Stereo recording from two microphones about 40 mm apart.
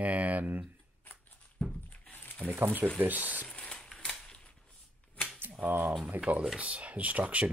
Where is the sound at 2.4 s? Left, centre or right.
Left.